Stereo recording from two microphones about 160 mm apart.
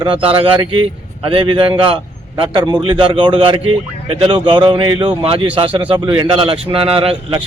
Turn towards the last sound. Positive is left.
turn(degrees=-35)  # may be behind; listen again after turning